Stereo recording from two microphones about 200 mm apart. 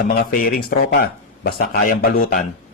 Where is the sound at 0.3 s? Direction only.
45° left (ahead or behind).